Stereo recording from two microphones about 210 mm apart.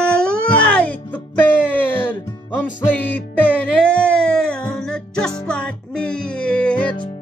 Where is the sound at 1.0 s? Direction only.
10° left (ahead or behind).